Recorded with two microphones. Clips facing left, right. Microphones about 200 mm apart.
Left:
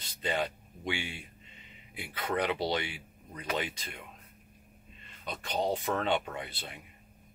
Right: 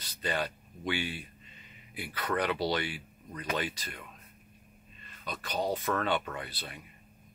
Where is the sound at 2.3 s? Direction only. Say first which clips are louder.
Even; 20° left (ahead or behind).